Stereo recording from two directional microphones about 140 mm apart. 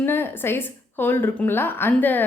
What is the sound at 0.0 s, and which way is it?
Speech, 15° left (ahead or behind).